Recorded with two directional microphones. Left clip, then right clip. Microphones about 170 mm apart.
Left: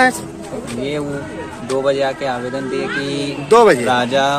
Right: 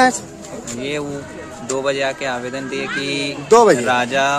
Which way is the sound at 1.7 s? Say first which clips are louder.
Left 3 dB; 45° right (ahead or behind).